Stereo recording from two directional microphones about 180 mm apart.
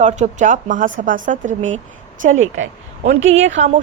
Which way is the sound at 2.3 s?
90° right.